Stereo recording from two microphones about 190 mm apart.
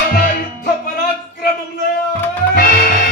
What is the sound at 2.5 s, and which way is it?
Music, 50° left (ahead or behind).